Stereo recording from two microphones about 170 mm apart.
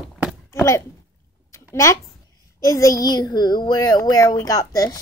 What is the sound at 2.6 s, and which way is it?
A child's voice, 20° left (ahead or behind).